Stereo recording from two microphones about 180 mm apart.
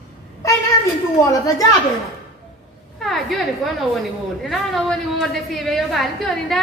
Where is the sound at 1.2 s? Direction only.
20° left (ahead or behind).